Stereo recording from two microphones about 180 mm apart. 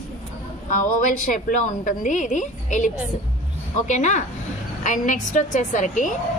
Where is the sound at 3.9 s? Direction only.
40° left (ahead or behind).